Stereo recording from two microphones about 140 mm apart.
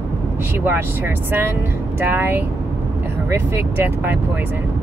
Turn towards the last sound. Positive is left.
turn(degrees=-15)  # may be behind; listen again after turning